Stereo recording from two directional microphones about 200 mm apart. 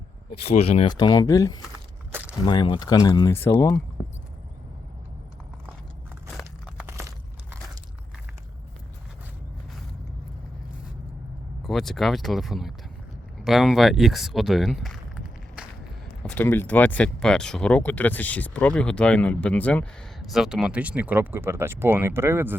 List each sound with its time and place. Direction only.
0.4 s speech: 30° left (ahead or behind)
0.9 s speech: 20° left (ahead or behind)
6.7 s a sound: 10° right (ahead or behind)
11.6 s speech: centre (ahead or behind)